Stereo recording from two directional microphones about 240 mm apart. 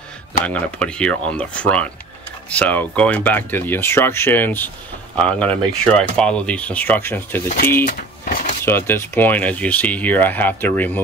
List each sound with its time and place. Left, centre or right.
0.5 s speech: centre
7.8 s a sound: left
8.6 s speech: centre